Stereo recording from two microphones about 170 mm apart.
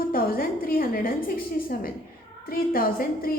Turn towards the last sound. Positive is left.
turn(degrees=60)  # may be behind; listen again after turning